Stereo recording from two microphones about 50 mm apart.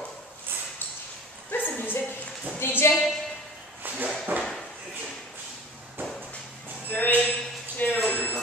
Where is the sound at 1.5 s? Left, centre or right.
Left.